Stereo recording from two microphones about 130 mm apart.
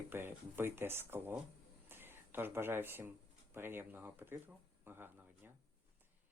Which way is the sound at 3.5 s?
15° right (ahead or behind).